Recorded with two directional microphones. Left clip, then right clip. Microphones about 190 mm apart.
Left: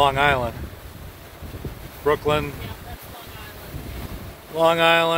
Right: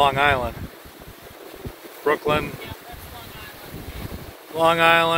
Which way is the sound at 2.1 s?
5° left (ahead or behind).